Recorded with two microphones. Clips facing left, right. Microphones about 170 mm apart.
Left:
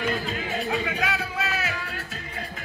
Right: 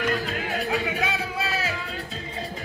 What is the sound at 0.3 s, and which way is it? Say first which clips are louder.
Music: right 1 dB; centre (ahead or behind).